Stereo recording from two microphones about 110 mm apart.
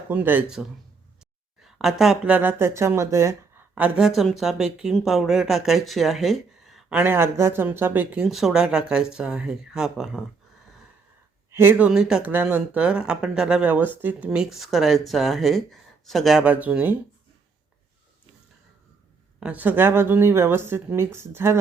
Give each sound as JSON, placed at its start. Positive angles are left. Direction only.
{"t": 0.1, "sound": "speech", "side_deg": -15}
{"t": 2.3, "sound": "speech", "side_deg": -15}
{"t": 3.8, "sound": "speech", "side_deg": -10}
{"t": 6.9, "sound": "speech", "side_deg": -20}
{"t": 8.3, "sound": "speech", "side_deg": -5}
{"t": 11.5, "sound": "speech", "side_deg": -20}
{"t": 11.9, "sound": "speech", "side_deg": -5}
{"t": 12.3, "sound": "speech", "side_deg": -20}
{"t": 14.3, "sound": "speech", "side_deg": 0}
{"t": 16.4, "sound": "speech", "side_deg": -15}
{"t": 19.4, "sound": "speech", "side_deg": -15}